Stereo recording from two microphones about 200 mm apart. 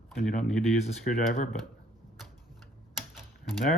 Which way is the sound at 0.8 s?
35° left (ahead or behind).